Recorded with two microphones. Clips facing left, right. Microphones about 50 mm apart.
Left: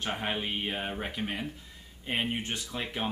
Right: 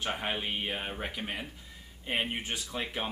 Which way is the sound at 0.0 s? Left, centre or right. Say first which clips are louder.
Left 1 dB; centre.